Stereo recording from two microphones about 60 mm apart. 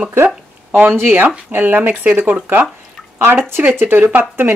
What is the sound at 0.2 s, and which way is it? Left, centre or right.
Speech, right.